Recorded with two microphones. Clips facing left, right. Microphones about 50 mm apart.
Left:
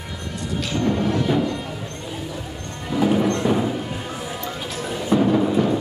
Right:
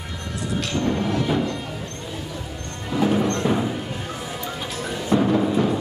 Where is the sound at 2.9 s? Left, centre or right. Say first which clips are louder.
Left 1 dB; centre.